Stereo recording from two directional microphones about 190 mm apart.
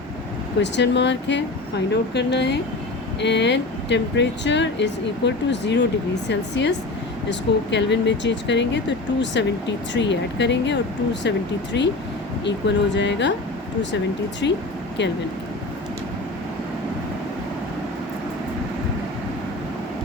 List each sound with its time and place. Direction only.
0.6 s speech: 65° left (ahead or behind)
14.4 s speech: 70° left (ahead or behind)